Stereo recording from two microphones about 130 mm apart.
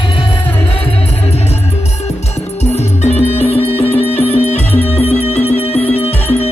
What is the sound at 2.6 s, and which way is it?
Music, 60° left (ahead or behind).